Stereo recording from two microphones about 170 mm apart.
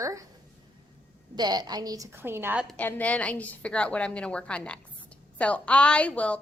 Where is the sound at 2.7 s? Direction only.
10° left (ahead or behind).